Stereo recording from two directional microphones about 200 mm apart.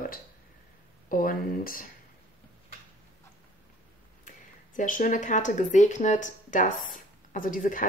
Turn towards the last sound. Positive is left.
turn(degrees=40)  # may be behind; listen again after turning